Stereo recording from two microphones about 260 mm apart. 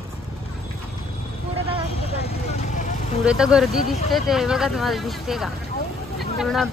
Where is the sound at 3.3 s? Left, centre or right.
Centre.